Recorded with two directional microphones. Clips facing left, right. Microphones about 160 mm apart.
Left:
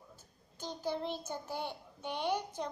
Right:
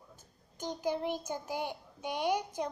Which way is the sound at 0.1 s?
15° right (ahead or behind).